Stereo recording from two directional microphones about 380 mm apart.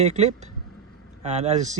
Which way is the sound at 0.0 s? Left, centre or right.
Centre.